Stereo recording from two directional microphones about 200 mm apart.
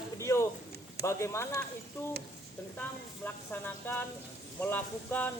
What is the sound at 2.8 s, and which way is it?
A woman's voice, 10° left (ahead or behind).